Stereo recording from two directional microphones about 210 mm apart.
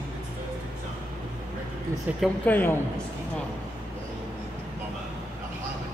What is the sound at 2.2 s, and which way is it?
Speech, 10° left (ahead or behind).